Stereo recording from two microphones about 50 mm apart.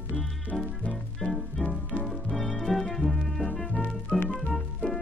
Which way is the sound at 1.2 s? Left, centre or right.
Centre.